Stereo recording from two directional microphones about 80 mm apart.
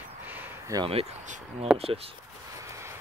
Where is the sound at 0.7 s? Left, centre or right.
Right.